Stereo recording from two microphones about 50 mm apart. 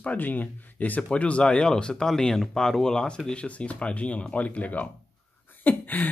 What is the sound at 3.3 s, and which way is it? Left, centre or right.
Speech, left.